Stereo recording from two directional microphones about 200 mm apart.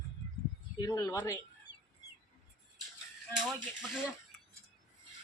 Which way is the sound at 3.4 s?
Centre (ahead or behind).